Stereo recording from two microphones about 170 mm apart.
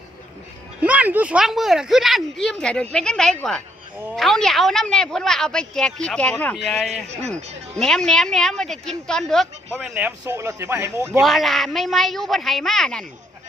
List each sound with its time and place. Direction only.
0.8 s speech: 10° right (ahead or behind)
6.9 s a man's voice: 40° right (ahead or behind)
7.8 s speech: 5° left (ahead or behind)
10.2 s speech: 15° right (ahead or behind)
11.2 s speech: centre (ahead or behind)